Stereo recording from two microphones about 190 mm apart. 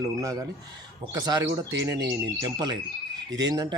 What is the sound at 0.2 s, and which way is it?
Speech, 20° right (ahead or behind).